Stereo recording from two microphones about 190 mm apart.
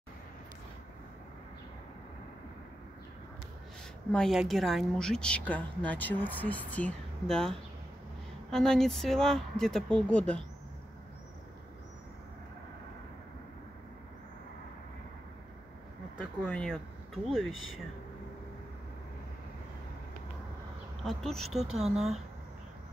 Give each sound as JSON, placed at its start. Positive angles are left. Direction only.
{"t": 4.1, "sound": "a woman's voice", "side_deg": 0}
{"t": 16.4, "sound": "speech", "side_deg": 5}
{"t": 17.5, "sound": "speech", "side_deg": 90}
{"t": 21.0, "sound": "a woman's voice", "side_deg": 0}
{"t": 21.7, "sound": "speech", "side_deg": -35}